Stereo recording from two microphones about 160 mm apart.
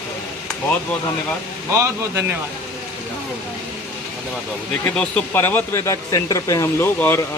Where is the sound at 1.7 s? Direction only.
15° right (ahead or behind).